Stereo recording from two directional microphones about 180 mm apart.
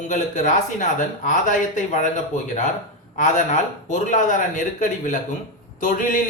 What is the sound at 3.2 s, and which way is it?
A man's voice, 45° left (ahead or behind).